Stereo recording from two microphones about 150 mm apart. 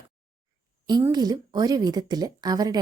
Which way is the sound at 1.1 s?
25° right (ahead or behind).